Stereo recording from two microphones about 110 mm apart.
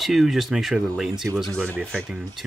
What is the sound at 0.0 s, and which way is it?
Speech, centre (ahead or behind).